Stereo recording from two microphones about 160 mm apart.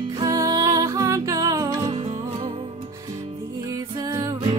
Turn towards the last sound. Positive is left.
turn(degrees=-20)  # may be behind; listen again after turning